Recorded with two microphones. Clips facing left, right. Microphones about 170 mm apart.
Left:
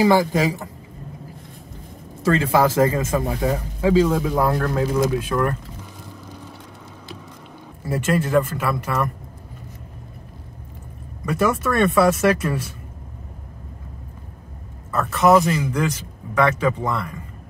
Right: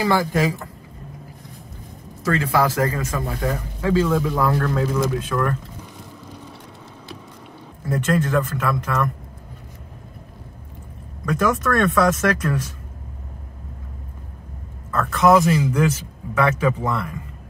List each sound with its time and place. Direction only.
0.0 s speech: 15° left (ahead or behind)
2.2 s speech: 25° left (ahead or behind); by 5.6 s 10° left (ahead or behind)
7.8 s speech: 10° left (ahead or behind)
11.2 s speech: 10° left (ahead or behind)
14.9 s speech: 10° left (ahead or behind)